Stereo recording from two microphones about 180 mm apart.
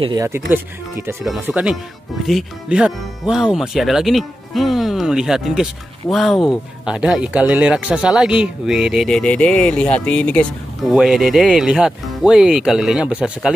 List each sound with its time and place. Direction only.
0.0 s speech: 20° right (ahead or behind)